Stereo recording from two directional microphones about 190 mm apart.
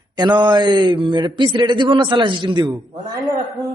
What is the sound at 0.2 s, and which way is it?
A man's voice, 25° right (ahead or behind).